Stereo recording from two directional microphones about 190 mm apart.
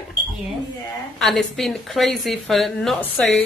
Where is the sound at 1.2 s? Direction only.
Centre (ahead or behind).